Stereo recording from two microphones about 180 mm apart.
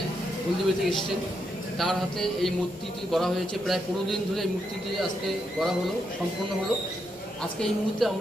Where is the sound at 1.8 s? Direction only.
Centre (ahead or behind).